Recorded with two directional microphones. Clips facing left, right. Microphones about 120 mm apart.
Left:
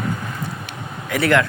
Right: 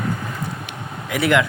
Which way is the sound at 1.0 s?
15° right (ahead or behind).